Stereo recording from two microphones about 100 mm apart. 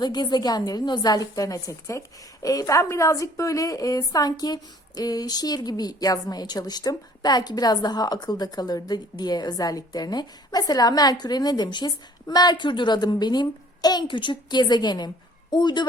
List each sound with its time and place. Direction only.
0.0 s a woman's voice: 45° left (ahead or behind)